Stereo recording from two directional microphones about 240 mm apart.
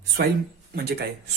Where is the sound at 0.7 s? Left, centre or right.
Right.